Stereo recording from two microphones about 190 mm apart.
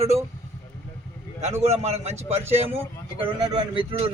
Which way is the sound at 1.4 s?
35° right (ahead or behind).